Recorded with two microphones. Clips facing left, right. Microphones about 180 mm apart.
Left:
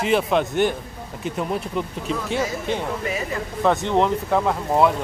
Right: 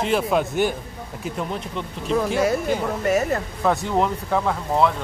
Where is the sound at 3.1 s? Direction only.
45° right (ahead or behind).